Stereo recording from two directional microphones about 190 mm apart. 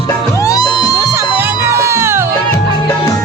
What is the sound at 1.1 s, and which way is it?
Music, 15° right (ahead or behind).